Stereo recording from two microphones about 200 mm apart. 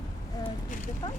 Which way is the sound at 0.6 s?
40° left (ahead or behind).